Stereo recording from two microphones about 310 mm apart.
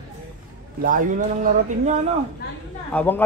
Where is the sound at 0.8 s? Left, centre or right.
Right.